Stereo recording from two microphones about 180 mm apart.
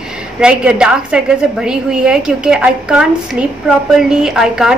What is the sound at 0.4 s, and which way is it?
A woman's voice, 5° right (ahead or behind).